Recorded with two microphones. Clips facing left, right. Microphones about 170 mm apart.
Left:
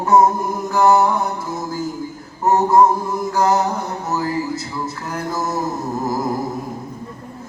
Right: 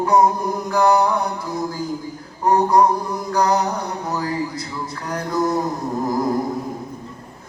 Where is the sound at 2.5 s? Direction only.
25° left (ahead or behind).